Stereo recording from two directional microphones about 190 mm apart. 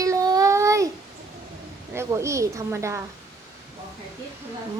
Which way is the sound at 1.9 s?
15° right (ahead or behind).